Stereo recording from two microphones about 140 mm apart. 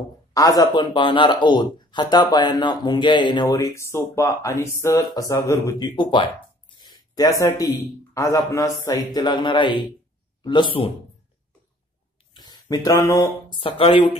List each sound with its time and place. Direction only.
0.3 s speech: 25° left (ahead or behind)
12.4 s speech: 30° left (ahead or behind)
13.6 s speech: 40° left (ahead or behind)